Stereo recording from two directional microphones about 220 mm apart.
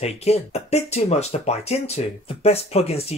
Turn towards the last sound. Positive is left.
turn(degrees=30)  # may be behind; listen again after turning